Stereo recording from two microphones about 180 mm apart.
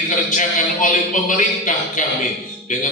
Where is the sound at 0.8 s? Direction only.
45° left (ahead or behind).